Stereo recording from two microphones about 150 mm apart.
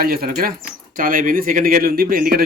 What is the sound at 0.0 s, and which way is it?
A man's voice, 80° right.